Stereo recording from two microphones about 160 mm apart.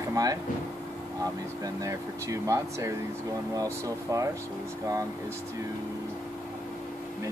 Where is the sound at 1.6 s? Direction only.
20° right (ahead or behind).